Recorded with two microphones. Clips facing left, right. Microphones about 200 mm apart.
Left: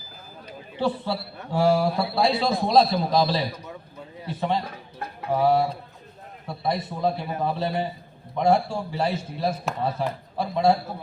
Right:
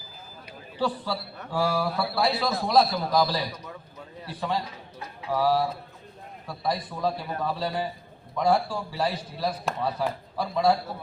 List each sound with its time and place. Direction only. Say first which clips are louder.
0.8 s a man's voice: left 3 dB; 25° left (ahead or behind)
4.6 s a man's voice: left 4 dB; 55° left (ahead or behind)
5.3 s a man's voice: left 3 dB; 25° left (ahead or behind)